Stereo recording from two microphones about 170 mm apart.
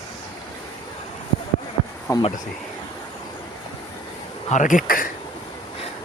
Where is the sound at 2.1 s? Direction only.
15° left (ahead or behind).